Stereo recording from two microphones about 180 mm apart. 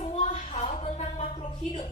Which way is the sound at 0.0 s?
40° left (ahead or behind).